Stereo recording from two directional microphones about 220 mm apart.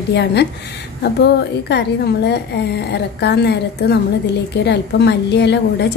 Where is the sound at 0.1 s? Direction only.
50° left (ahead or behind).